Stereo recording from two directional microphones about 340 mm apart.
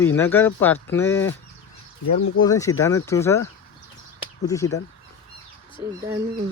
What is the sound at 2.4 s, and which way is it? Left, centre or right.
Speech, centre.